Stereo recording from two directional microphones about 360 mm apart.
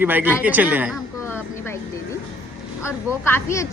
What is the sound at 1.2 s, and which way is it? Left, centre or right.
Vehicle, centre.